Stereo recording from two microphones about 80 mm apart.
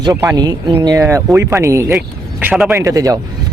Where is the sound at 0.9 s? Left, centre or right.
Right.